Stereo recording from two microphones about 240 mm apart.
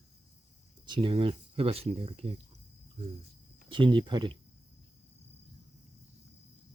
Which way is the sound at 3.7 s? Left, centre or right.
Right.